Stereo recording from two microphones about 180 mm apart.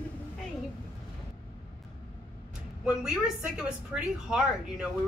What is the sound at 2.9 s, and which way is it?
A woman's voice, 5° right (ahead or behind).